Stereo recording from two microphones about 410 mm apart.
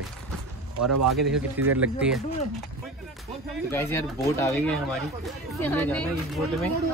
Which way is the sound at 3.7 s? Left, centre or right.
Centre.